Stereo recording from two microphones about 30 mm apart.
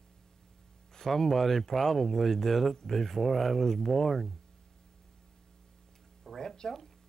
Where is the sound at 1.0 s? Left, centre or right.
Centre.